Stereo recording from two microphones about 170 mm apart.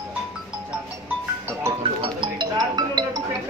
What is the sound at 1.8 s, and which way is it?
Speech, 30° right (ahead or behind).